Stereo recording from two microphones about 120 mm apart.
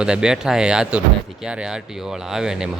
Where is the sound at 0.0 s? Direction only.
5° right (ahead or behind).